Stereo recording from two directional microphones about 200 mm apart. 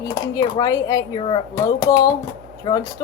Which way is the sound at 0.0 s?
20° left (ahead or behind).